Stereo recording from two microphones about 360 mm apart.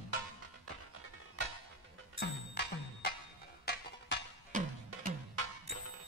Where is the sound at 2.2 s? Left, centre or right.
Left.